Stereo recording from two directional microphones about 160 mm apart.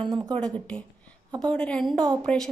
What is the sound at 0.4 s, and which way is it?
A woman's voice, 5° left (ahead or behind).